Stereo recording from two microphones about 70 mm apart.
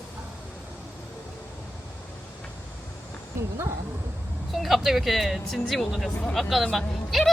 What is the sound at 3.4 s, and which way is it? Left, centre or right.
Speech, right.